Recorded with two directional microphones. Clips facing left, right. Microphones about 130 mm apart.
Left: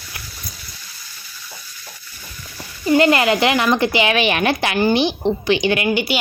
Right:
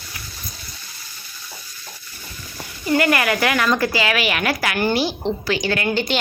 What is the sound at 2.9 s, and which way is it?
A woman's voice, 25° left (ahead or behind).